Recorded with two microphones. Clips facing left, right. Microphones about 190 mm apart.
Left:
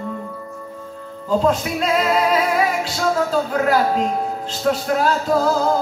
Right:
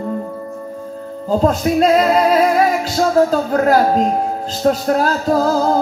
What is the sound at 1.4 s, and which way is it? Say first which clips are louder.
Music: right 7 dB; 45° right (ahead or behind).